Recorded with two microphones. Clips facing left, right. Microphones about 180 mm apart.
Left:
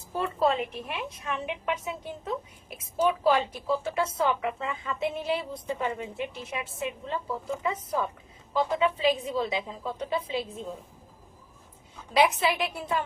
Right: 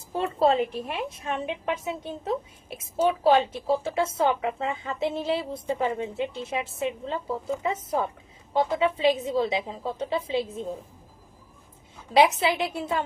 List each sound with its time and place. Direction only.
0.1 s a woman's voice: 30° right (ahead or behind)
12.1 s a woman's voice: 25° right (ahead or behind)